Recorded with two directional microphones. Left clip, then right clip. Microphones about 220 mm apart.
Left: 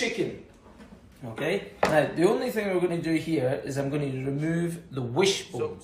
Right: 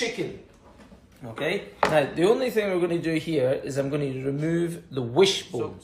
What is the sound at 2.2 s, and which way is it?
Speech, 30° right (ahead or behind).